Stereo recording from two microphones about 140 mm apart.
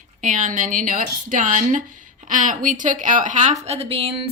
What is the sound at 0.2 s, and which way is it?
A woman's voice, 70° right (ahead or behind).